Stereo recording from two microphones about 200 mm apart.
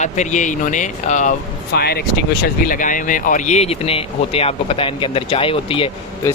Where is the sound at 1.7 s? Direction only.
50° left (ahead or behind).